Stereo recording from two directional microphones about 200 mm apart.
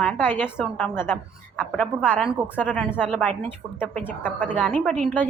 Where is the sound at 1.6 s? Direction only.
5° left (ahead or behind).